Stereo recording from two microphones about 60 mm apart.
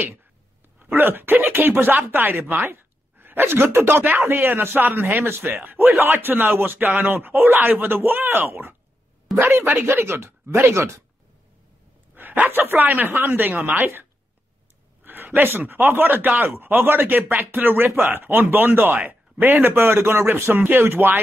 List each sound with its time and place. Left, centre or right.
0.7 s speech: right
9.4 s speech: right
12.2 s speech: right
13.7 s speech: right
15.0 s speech: right
20.8 s speech: right